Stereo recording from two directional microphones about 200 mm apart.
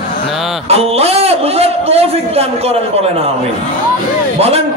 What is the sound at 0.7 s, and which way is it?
A man's voice, 30° right (ahead or behind).